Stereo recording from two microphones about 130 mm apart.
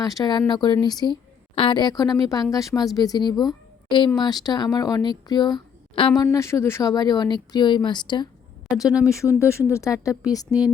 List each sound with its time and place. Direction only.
0.0 s a woman's voice: 30° left (ahead or behind)
6.3 s a woman's voice: 20° left (ahead or behind)